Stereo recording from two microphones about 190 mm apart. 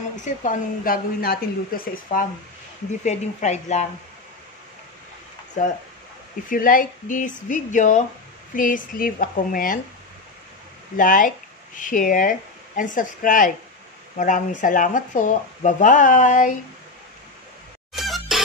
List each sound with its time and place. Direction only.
0.1 s a woman's voice: 40° left (ahead or behind)
3.0 s speech: 40° left (ahead or behind)
5.6 s a woman's voice: 40° left (ahead or behind)
11.0 s speech: 45° left (ahead or behind)
17.9 s music: centre (ahead or behind)